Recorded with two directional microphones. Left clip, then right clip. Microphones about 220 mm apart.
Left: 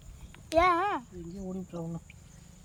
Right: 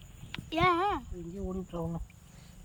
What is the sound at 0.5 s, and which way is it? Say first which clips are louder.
Speech: left 2 dB; 20° left (ahead or behind).